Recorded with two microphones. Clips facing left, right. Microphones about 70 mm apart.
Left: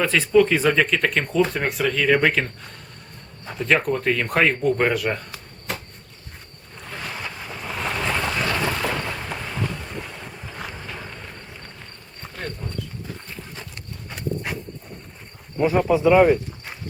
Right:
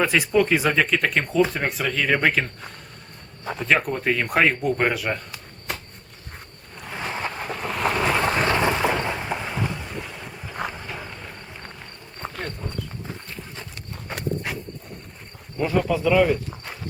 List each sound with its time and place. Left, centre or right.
0.0 s speech: centre
3.7 s speech: centre
6.9 s vehicle: right
7.3 s vehicle: right
7.7 s boat: centre
8.1 s boat: right; by 11.2 s centre
13.2 s walk: centre
14.4 s a sound: centre
15.5 s speech: centre